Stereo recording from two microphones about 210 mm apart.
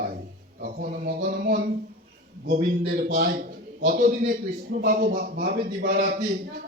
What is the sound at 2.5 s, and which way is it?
A man's voice, 40° right (ahead or behind).